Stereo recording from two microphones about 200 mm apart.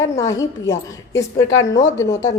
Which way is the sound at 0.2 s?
15° left (ahead or behind).